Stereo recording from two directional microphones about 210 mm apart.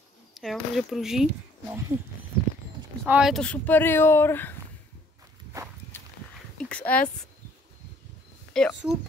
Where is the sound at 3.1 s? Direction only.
5° right (ahead or behind).